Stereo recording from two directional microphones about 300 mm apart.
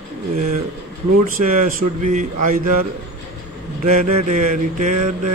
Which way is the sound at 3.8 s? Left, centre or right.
Right.